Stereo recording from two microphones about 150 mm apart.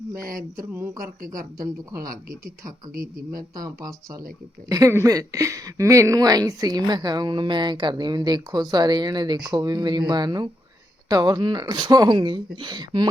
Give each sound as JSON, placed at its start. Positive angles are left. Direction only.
{"t": 0.3, "sound": "speech", "side_deg": -70}
{"t": 4.7, "sound": "speech", "side_deg": -20}